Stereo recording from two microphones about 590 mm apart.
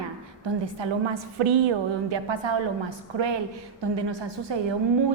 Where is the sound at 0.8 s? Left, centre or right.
Right.